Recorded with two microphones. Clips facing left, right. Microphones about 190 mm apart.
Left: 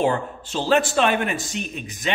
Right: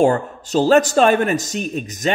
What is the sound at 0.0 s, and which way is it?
Speech, 45° right (ahead or behind).